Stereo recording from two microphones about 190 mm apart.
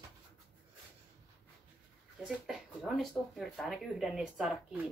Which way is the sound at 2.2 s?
5° right (ahead or behind).